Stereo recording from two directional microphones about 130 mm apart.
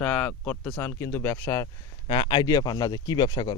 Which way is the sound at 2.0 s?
40° left (ahead or behind).